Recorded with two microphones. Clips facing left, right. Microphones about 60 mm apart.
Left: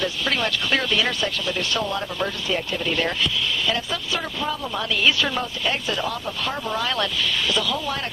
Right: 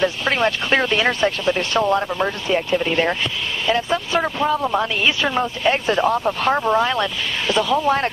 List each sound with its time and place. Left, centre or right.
0.0 s a woman's voice: right